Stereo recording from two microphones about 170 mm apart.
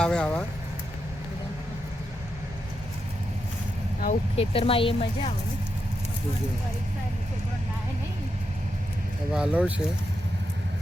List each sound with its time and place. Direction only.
0.0 s speech: 5° left (ahead or behind)
4.4 s speech: 35° left (ahead or behind)
9.3 s speech: 5° right (ahead or behind)